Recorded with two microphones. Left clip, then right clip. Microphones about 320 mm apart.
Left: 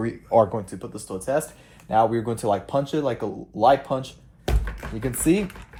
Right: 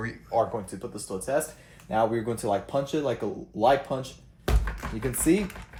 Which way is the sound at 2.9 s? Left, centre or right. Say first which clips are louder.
Left 3 dB; left.